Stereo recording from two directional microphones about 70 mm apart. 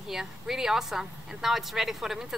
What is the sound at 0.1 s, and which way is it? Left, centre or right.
A woman's voice, centre.